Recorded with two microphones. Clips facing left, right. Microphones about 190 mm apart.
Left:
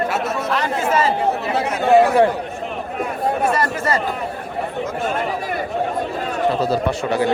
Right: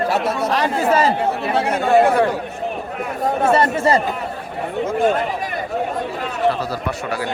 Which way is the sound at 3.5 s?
25° right (ahead or behind).